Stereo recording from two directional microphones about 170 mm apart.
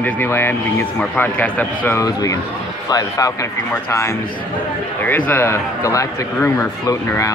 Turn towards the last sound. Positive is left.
turn(degrees=20)  # may be behind; listen again after turning